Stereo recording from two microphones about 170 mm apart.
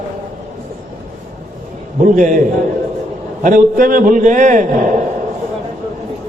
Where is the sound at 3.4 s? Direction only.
55° right (ahead or behind).